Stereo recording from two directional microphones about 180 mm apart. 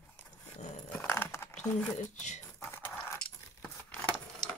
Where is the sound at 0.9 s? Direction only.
15° left (ahead or behind).